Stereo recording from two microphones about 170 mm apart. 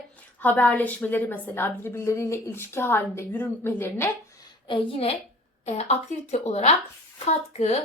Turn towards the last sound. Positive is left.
turn(degrees=40)  # may be behind; listen again after turning